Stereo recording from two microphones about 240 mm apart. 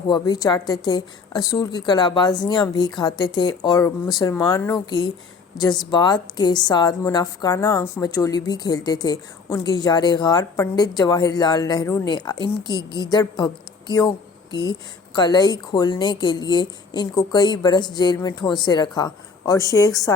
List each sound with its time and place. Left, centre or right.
0.1 s a woman's voice: centre